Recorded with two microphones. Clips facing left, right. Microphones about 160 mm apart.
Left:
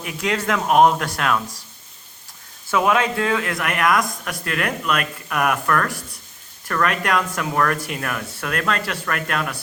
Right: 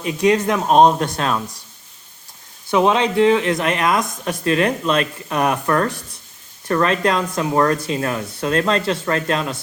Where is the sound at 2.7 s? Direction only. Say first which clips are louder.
Right 3 dB; 25° right (ahead or behind).